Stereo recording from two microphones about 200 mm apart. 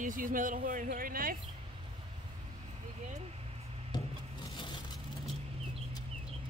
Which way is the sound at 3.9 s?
20° left (ahead or behind).